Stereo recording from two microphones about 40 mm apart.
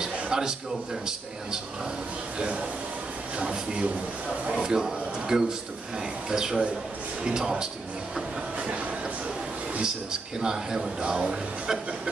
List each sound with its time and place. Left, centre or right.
0.0 s a sound: centre
3.3 s speech: right
4.5 s a man's voice: centre
10.4 s a man's voice: centre